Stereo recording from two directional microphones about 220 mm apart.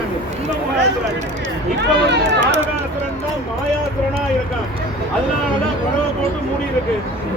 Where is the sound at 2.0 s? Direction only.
50° right (ahead or behind).